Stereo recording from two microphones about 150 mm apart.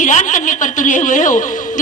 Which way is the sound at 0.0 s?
55° left (ahead or behind).